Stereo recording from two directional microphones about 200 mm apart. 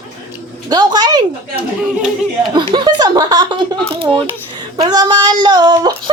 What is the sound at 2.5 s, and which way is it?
Speech, 25° right (ahead or behind).